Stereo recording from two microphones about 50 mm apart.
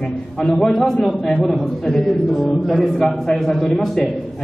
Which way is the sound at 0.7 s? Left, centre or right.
Centre.